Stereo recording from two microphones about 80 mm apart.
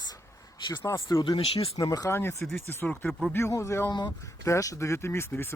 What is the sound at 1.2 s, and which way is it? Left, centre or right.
Speech, left.